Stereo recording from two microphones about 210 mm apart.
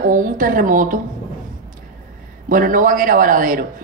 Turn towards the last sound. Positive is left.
turn(degrees=-40)  # may be behind; listen again after turning